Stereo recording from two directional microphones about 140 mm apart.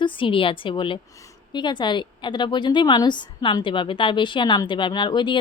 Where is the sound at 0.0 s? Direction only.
35° left (ahead or behind).